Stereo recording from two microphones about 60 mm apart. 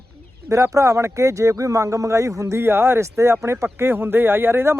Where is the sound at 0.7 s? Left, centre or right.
Right.